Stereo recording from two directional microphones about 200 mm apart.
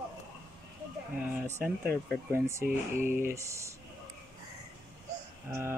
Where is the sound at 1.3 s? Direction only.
5° right (ahead or behind).